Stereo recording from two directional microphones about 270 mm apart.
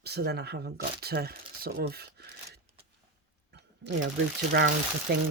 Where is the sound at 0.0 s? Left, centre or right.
Right.